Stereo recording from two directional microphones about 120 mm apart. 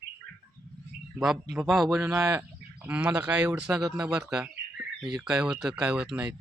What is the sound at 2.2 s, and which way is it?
Speech, 30° right (ahead or behind).